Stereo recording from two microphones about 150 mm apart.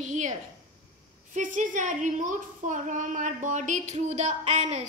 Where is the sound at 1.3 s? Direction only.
60° right (ahead or behind).